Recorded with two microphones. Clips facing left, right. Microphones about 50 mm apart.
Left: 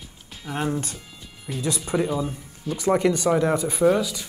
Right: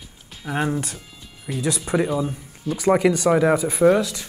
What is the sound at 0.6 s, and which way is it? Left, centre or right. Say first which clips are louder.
Speech: right 2 dB; centre.